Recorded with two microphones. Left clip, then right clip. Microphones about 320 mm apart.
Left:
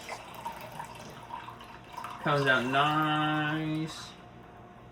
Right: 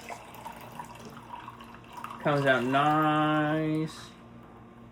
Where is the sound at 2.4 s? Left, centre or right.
Centre.